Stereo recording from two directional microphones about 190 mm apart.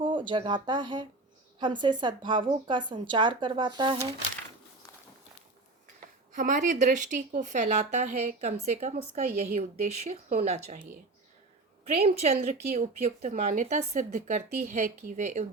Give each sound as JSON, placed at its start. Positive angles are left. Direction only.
{"t": 0.0, "sound": "a woman's voice", "side_deg": -25}
{"t": 6.3, "sound": "a woman's voice", "side_deg": -45}
{"t": 12.0, "sound": "a woman's voice", "side_deg": -35}